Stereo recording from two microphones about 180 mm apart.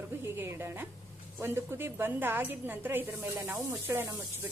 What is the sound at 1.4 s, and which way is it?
A woman's voice, 15° right (ahead or behind).